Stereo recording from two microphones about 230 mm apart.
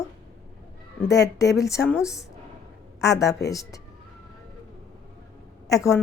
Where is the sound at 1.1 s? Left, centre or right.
Left.